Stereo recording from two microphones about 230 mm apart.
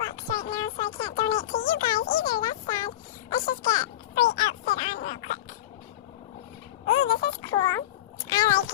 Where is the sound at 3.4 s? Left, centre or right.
Left.